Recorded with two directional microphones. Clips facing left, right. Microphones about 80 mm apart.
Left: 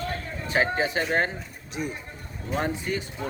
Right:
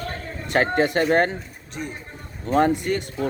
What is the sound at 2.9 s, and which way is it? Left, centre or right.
Speech, right.